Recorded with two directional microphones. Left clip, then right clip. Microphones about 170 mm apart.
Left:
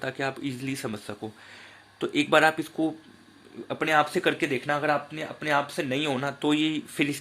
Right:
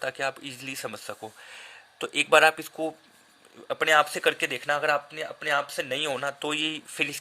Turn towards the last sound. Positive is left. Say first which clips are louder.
# left 1 dB
turn(degrees=-35)  # may be behind; listen again after turning